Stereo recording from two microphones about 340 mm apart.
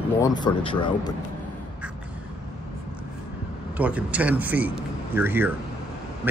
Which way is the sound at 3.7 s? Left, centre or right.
Centre.